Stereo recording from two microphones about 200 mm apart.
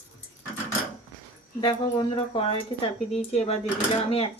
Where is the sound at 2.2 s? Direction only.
30° left (ahead or behind).